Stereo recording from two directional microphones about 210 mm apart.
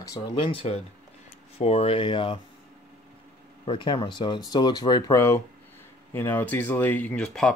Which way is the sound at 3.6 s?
25° left (ahead or behind).